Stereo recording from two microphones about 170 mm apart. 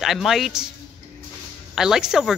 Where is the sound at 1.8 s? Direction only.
5° right (ahead or behind).